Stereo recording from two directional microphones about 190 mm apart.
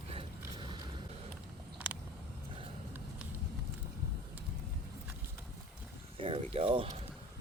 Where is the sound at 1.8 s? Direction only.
5° right (ahead or behind).